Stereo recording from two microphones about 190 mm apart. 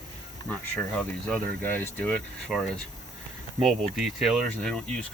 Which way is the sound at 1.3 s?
10° left (ahead or behind).